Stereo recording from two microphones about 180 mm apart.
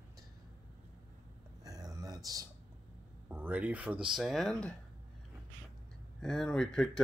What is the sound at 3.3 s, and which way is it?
Speech, 10° right (ahead or behind).